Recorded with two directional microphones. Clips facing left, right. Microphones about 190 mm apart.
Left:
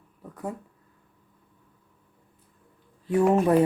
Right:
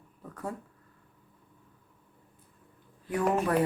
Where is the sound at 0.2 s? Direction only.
15° left (ahead or behind).